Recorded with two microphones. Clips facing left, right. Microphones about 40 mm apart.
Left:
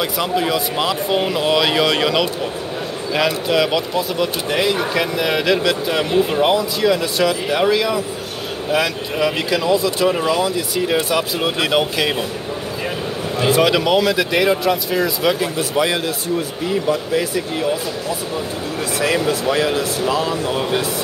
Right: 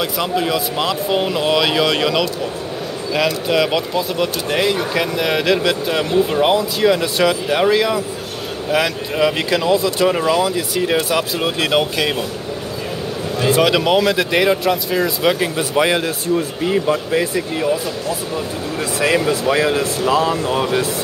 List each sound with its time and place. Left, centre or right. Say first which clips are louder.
0.0 s speech: even; centre
3.4 s speech: even; centre
6.5 s speech: right 1 dB; centre
13.5 s speech: right 1 dB; centre
19.2 s speech: right 2 dB; right
20.1 s speech: right 5 dB; right